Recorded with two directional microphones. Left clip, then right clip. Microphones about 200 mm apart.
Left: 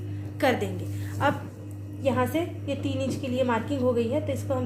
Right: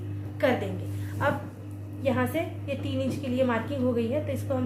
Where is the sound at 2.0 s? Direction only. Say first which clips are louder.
Left 2 dB; 35° left (ahead or behind).